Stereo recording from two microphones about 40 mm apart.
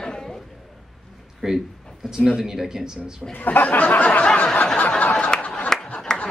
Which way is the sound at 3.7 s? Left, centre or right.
Left.